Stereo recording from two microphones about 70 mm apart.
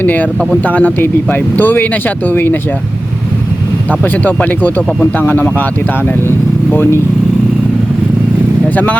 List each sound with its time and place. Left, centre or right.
0.0 s speech: left
4.0 s speech: left
6.7 s speech: left
8.7 s speech: left